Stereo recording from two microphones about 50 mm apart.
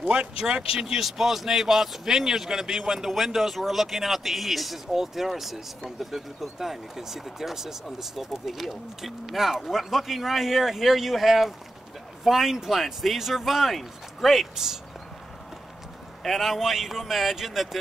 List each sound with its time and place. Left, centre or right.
0.0 s a man's voice: right; by 14.5 s centre
14.5 s speech: centre
16.2 s a man's voice: centre